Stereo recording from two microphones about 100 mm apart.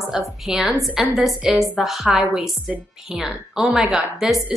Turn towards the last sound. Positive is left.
turn(degrees=-5)  # may be behind; listen again after turning